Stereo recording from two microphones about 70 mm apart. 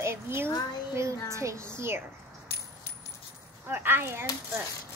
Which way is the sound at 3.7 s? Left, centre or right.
Right.